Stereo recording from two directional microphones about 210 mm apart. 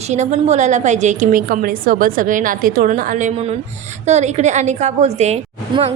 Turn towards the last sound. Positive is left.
turn(degrees=-30)  # may be behind; listen again after turning